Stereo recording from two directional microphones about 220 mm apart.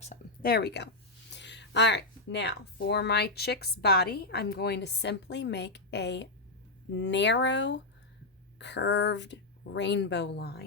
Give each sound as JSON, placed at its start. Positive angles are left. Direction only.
{"t": 0.4, "sound": "speech", "side_deg": 45}